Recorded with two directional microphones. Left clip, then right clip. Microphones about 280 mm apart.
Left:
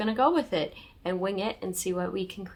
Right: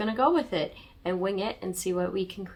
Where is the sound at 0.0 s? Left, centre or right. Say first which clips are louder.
Even; centre.